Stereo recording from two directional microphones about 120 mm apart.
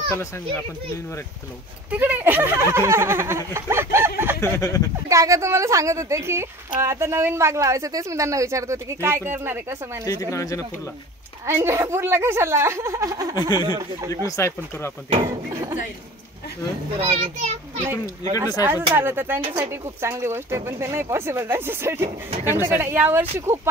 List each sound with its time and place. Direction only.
1.9 s a woman's voice: 15° right (ahead or behind)
4.4 s speech: 25° left (ahead or behind)
5.0 s a woman's voice: 25° right (ahead or behind)
10.0 s speech: 25° left (ahead or behind)
11.4 s a woman's voice: 25° right (ahead or behind)
14.2 s speech: 25° left (ahead or behind)
15.2 s a sound: 25° right (ahead or behind)
16.9 s a child's voice: 50° right (ahead or behind)
18.4 s a woman's voice: 20° right (ahead or behind)